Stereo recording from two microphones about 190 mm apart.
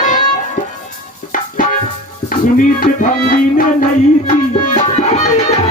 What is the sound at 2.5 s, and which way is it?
Music, 45° left (ahead or behind).